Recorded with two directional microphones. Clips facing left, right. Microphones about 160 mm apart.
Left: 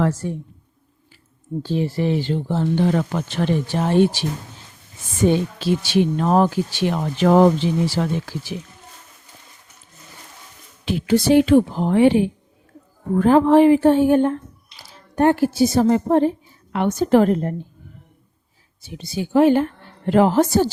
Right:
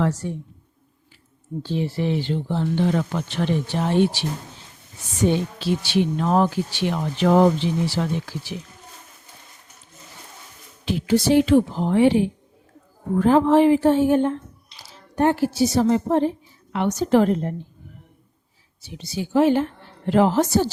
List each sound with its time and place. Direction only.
1.6 s speech: 45° left (ahead or behind)
5.5 s speech: 45° left (ahead or behind)
10.8 s speech: 60° left (ahead or behind)
18.8 s speech: 50° left (ahead or behind)